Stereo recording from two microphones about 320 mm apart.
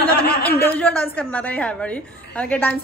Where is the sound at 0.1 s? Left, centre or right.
Left.